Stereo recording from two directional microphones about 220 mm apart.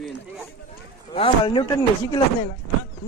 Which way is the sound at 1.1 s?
25° left (ahead or behind).